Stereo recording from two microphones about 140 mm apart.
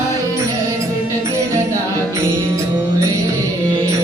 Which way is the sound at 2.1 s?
20° right (ahead or behind).